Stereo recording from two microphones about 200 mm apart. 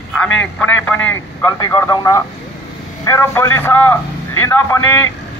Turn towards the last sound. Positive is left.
turn(degrees=10)  # may be behind; listen again after turning